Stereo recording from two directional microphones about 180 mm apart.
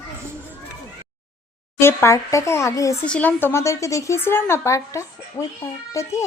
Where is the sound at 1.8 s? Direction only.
15° left (ahead or behind).